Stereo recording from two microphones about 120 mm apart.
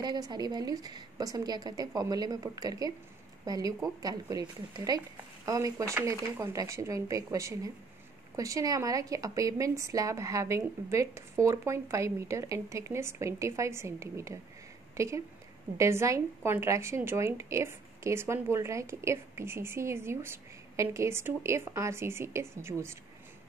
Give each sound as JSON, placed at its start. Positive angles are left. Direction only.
{"t": 0.0, "sound": "a woman's voice", "side_deg": -35}